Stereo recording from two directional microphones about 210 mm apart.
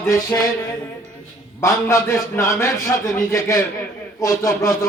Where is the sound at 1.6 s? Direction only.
15° left (ahead or behind).